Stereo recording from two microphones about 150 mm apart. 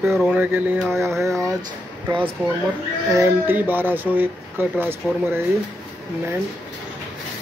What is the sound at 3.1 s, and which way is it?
Speech, 15° right (ahead or behind).